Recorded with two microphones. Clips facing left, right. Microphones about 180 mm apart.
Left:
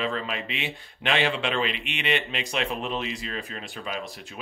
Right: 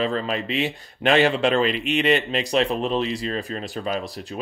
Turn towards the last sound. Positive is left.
turn(degrees=-40)  # may be behind; listen again after turning